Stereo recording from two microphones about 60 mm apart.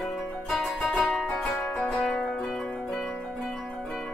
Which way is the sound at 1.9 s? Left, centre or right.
Centre.